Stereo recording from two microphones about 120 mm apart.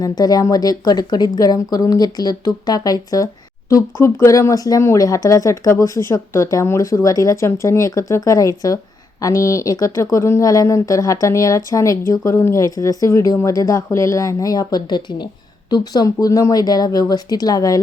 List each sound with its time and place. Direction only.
0.0 s speech: 30° left (ahead or behind)